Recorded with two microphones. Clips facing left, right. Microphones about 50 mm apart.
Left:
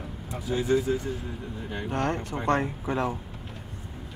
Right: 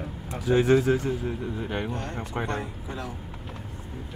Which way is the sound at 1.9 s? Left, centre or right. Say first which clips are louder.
Left 6 dB; left.